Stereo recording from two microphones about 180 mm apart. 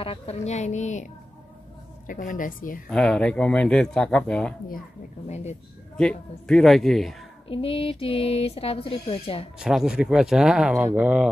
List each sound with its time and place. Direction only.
0.0 s a woman's voice: 35° left (ahead or behind); by 2.8 s 50° left (ahead or behind)
2.9 s speech: 5° left (ahead or behind)
5.3 s speech: 40° left (ahead or behind)
5.9 s speech: 5° left (ahead or behind)
7.4 s speech: 30° left (ahead or behind)
9.6 s speech: 5° right (ahead or behind)